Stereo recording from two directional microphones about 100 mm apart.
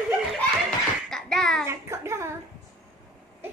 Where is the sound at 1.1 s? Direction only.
5° left (ahead or behind).